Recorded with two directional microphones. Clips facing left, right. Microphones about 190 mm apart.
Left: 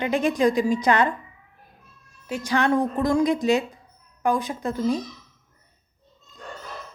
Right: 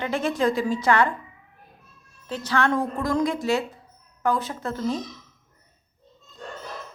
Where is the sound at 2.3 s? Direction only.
10° left (ahead or behind).